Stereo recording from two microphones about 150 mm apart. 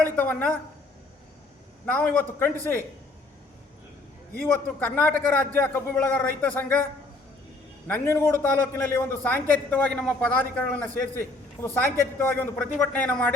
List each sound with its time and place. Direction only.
0.0 s a man's voice: 15° left (ahead or behind)
1.9 s a man's voice: 10° left (ahead or behind)
4.5 s a man's voice: 15° left (ahead or behind)
7.9 s a man's voice: 15° left (ahead or behind)